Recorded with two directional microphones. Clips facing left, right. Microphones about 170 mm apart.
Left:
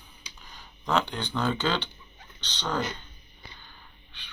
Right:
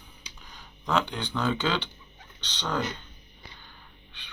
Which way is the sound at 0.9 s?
Centre (ahead or behind).